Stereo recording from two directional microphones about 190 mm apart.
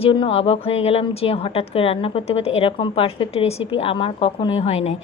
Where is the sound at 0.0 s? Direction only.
30° left (ahead or behind).